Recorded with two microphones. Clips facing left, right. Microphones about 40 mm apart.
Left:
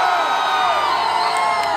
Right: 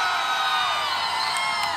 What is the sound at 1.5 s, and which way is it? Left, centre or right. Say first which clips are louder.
Crowd: left 7 dB; left.